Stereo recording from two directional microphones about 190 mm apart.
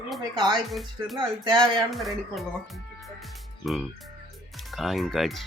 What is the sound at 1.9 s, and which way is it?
Speech, centre (ahead or behind).